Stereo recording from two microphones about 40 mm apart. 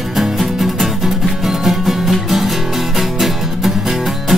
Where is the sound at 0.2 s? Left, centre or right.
Centre.